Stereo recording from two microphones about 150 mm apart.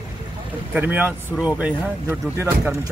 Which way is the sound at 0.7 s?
10° right (ahead or behind).